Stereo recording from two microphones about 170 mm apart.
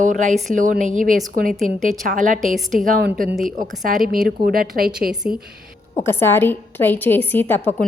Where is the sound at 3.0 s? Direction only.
65° right (ahead or behind).